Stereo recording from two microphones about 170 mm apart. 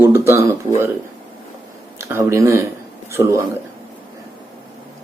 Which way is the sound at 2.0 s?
15° right (ahead or behind).